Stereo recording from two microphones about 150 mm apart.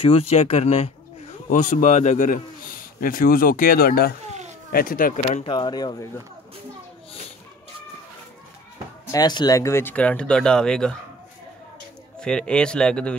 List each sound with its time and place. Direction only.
0.0 s speech: 40° left (ahead or behind)
1.5 s a man's voice: 60° left (ahead or behind)
3.0 s speech: 70° left (ahead or behind); by 4.1 s 85° left
4.7 s speech: 70° left (ahead or behind)
5.4 s speech: 35° left (ahead or behind)
9.1 s speech: 30° left (ahead or behind); by 11.0 s 5° left (ahead or behind)
12.2 s speech: 5° left (ahead or behind)